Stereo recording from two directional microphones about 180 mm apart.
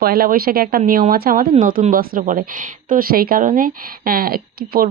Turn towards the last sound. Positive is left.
turn(degrees=-55)  # may be behind; listen again after turning